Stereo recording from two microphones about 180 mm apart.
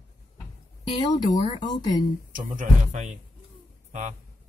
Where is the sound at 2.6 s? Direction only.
45° right (ahead or behind).